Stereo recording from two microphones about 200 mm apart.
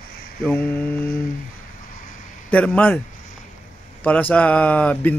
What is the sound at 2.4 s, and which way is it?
Speech, 5° left (ahead or behind).